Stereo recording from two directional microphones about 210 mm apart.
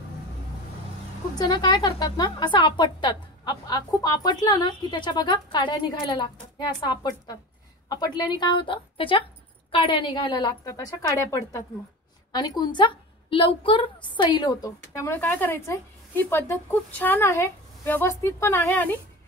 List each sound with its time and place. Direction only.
1.4 s a woman's voice: 20° left (ahead or behind)